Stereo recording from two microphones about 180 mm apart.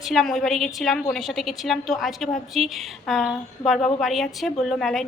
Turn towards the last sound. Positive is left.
turn(degrees=0)  # may be behind; listen again after turning